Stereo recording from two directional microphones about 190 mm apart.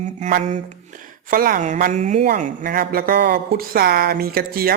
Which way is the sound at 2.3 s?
50° right (ahead or behind).